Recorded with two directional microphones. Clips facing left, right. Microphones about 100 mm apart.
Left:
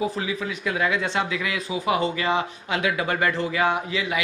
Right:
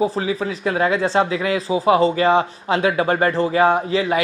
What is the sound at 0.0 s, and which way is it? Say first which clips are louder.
Speech: right 6 dB; 35° right (ahead or behind).